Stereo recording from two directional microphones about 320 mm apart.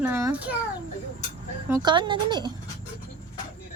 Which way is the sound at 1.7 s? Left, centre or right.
Centre.